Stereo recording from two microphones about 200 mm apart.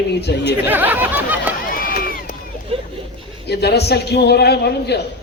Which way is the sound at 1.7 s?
45° left (ahead or behind).